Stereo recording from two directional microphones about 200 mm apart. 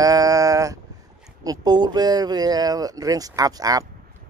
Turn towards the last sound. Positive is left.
turn(degrees=-20)  # may be behind; listen again after turning